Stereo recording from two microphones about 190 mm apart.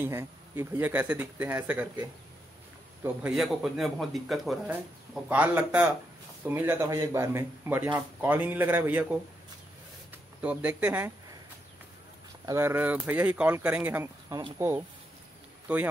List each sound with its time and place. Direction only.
0.0 s speech: 10° right (ahead or behind)
12.4 s speech: 15° right (ahead or behind)